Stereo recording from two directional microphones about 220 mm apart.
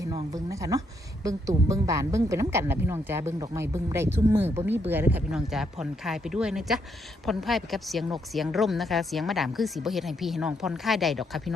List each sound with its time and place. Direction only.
0.0 s a woman's voice: 15° right (ahead or behind); by 11.5 s centre (ahead or behind)